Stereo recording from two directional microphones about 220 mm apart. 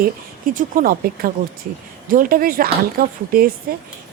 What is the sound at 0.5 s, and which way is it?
Speech, 40° right (ahead or behind).